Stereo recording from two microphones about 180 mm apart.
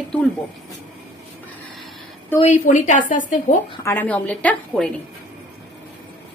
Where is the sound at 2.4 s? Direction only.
45° left (ahead or behind).